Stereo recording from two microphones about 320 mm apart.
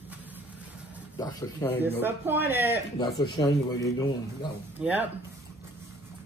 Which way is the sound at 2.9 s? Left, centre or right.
Centre.